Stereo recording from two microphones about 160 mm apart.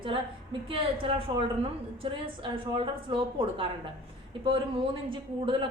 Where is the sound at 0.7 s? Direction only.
35° right (ahead or behind).